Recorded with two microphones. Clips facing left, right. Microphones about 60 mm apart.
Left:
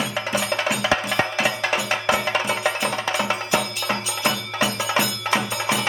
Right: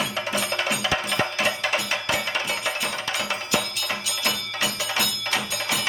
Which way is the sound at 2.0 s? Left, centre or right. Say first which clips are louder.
Left 5 dB; centre.